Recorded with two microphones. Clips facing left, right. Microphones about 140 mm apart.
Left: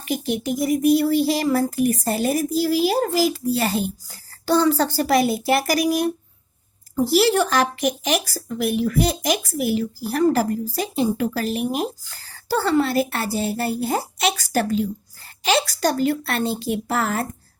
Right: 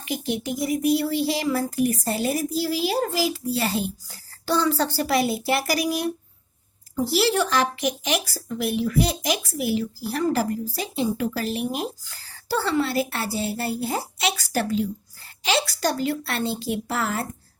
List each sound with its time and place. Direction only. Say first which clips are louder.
0.1 s speech: left 4 dB; 45° left (ahead or behind)